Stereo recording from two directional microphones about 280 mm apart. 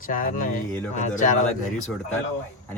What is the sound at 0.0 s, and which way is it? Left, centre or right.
Speech, left.